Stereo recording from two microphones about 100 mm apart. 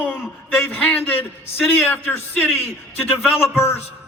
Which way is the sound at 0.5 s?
20° left (ahead or behind).